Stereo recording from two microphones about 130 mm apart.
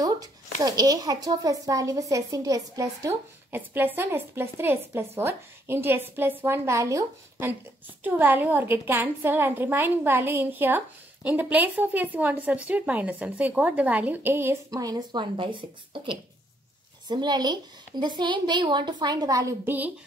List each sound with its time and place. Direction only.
0.6 s a woman's voice: 30° right (ahead or behind)
15.3 s a woman's voice: 40° right (ahead or behind); by 19.9 s 15° right (ahead or behind)